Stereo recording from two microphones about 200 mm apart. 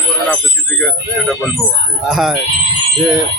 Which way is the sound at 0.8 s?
Centre (ahead or behind).